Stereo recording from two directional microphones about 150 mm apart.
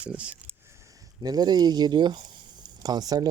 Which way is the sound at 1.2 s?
25° right (ahead or behind).